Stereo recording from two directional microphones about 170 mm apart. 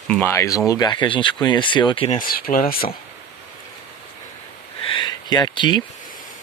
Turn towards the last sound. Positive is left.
turn(degrees=25)  # may be behind; listen again after turning